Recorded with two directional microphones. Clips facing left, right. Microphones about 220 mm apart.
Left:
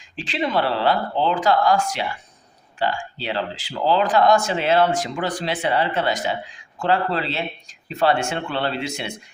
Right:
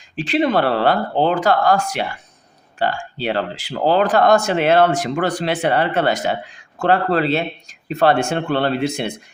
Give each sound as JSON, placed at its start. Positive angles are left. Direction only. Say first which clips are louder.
{"t": 0.2, "sound": "speech", "louder": "right 6 dB", "side_deg": -55}